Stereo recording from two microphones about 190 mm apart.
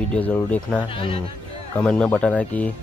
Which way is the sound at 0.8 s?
25° left (ahead or behind).